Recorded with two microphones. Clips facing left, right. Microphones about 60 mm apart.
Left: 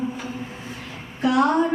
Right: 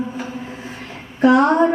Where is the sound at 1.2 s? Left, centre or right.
Right.